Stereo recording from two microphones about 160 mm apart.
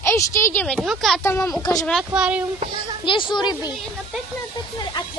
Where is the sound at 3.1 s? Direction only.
30° left (ahead or behind).